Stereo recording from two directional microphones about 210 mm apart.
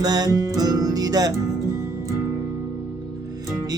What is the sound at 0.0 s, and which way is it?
Music, 20° right (ahead or behind).